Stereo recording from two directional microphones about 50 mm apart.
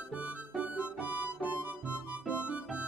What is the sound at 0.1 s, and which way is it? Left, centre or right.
Music, right.